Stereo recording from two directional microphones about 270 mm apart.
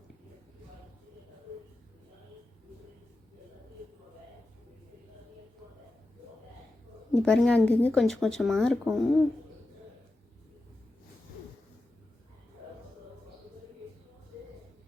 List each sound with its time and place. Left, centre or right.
7.1 s speech: centre